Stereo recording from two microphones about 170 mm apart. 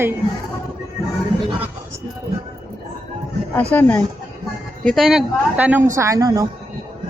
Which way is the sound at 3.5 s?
10° left (ahead or behind).